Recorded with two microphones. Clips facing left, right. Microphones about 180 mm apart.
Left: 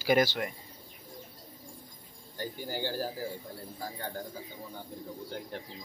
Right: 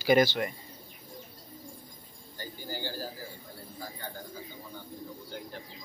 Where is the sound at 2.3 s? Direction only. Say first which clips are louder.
Left 4 dB; 65° left (ahead or behind).